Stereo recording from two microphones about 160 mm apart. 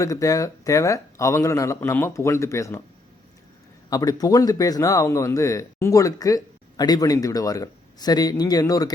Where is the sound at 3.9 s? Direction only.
25° left (ahead or behind).